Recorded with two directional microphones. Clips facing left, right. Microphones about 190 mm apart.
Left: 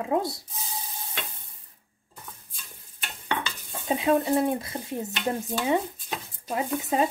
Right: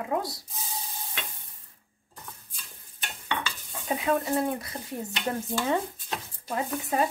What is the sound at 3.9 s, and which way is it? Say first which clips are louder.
Speech: left 4 dB; 20° left (ahead or behind).